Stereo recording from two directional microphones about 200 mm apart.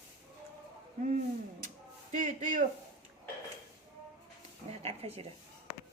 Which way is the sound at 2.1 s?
35° right (ahead or behind).